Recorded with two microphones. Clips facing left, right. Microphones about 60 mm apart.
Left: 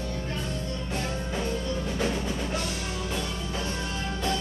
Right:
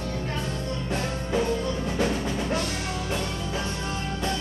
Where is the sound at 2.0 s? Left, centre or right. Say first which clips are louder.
Right 4 dB; right.